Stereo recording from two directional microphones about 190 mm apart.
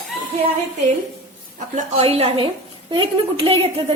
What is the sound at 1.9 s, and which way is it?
A woman's voice, 30° right (ahead or behind).